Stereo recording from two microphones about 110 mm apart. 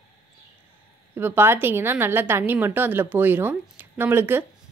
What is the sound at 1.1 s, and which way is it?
A woman's voice, 20° right (ahead or behind).